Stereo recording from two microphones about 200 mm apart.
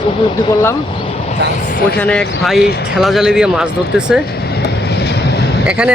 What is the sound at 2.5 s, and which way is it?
Speech, 55° left (ahead or behind).